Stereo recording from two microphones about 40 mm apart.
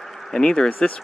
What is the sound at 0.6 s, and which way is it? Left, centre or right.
Speech, left.